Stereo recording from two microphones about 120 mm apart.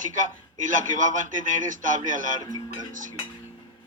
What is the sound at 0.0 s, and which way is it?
A man's voice, 90° right.